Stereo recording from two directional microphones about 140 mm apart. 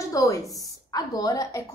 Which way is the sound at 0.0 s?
25° left (ahead or behind).